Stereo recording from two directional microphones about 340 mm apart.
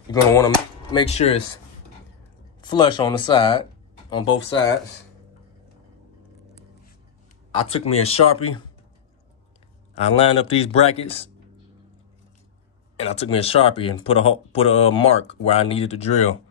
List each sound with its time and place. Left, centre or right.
0.1 s speech: centre
2.6 s speech: centre
7.5 s speech: centre
9.9 s speech: centre
13.0 s speech: centre